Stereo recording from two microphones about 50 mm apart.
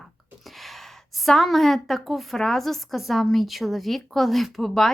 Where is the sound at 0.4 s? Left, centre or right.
Centre.